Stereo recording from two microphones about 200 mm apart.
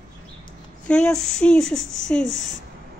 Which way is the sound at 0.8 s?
5° left (ahead or behind).